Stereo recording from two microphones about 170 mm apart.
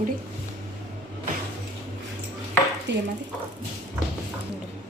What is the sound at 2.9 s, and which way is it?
Speech, 90° right.